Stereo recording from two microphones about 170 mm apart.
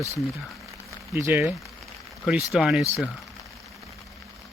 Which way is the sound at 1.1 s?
15° right (ahead or behind).